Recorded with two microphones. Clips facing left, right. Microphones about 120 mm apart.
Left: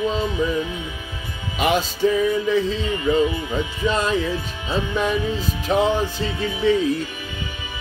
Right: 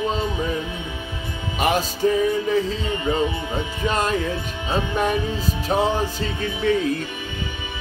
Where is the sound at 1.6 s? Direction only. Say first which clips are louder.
Left 1 dB; 40° right (ahead or behind).